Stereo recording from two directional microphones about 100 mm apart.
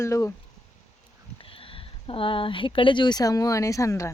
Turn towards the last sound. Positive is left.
turn(degrees=30)  # may be behind; listen again after turning